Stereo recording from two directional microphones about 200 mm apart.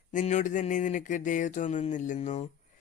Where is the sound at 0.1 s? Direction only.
35° left (ahead or behind).